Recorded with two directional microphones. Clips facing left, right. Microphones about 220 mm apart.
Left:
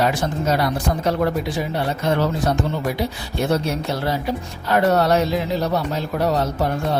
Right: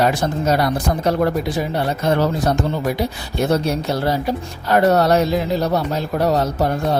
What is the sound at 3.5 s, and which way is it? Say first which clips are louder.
A man's voice: right 3 dB; 40° right (ahead or behind).